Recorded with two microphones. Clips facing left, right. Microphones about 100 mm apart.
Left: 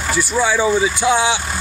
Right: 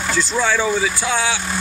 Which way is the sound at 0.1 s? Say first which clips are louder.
Left 2 dB; 10° left (ahead or behind).